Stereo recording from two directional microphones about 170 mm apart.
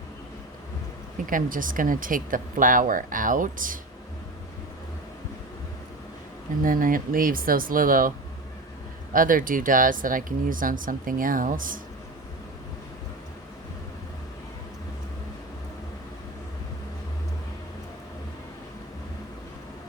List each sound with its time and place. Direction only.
1.3 s speech: 55° right (ahead or behind)
6.6 s speech: 55° right (ahead or behind)
9.1 s speech: 55° right (ahead or behind)